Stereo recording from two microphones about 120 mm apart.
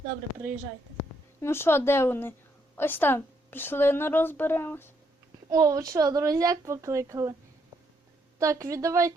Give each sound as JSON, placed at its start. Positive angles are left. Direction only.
{"t": 1.4, "sound": "a woman's voice", "side_deg": 20}
{"t": 5.5, "sound": "speech", "side_deg": -30}
{"t": 8.4, "sound": "speech", "side_deg": -25}